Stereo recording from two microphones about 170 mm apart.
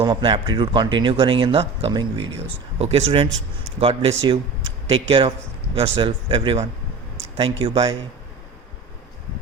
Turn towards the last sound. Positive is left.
turn(degrees=-30)  # may be behind; listen again after turning